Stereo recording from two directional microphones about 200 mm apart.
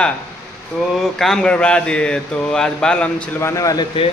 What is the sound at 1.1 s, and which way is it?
Speech, centre (ahead or behind).